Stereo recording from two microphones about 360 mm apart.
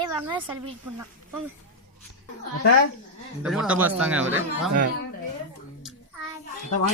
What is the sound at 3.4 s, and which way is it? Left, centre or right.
Speech, centre.